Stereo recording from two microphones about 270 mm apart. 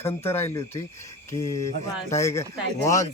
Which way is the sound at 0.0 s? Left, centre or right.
Centre.